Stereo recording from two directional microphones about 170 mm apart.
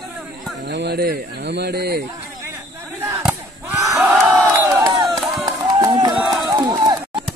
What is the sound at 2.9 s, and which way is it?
Chop, 15° right (ahead or behind).